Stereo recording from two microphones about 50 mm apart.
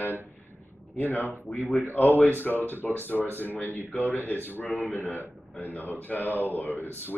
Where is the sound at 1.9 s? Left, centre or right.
Left.